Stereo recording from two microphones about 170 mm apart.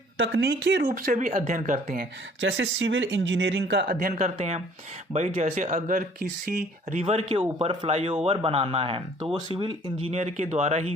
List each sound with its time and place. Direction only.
0.2 s speech: 90° right
0.9 s speech: 55° right (ahead or behind)
2.4 s speech: 90° right
3.9 s speech: 45° right (ahead or behind)
7.0 s speech: 35° right (ahead or behind)
10.1 s speech: 40° right (ahead or behind)